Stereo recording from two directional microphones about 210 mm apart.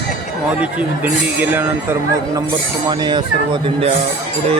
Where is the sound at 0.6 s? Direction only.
5° right (ahead or behind).